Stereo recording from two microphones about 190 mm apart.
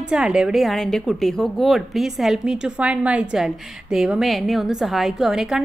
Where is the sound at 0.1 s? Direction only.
5° right (ahead or behind).